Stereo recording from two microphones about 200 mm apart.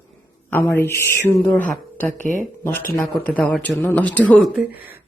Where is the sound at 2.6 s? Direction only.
10° left (ahead or behind).